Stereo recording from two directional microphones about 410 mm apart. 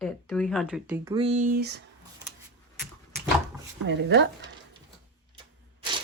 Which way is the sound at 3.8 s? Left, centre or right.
Right.